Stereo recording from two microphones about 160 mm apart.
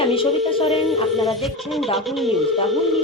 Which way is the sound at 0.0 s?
35° left (ahead or behind).